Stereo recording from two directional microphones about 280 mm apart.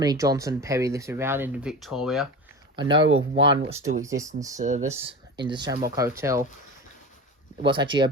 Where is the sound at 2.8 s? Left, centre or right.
Centre.